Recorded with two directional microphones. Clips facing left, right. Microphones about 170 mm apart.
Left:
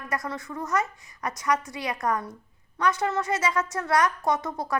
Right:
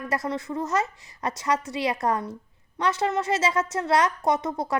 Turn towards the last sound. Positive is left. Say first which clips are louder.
# right 2 dB
turn(degrees=-20)  # may be behind; listen again after turning